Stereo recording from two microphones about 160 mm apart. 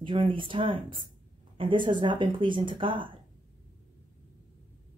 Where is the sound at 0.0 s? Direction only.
30° right (ahead or behind).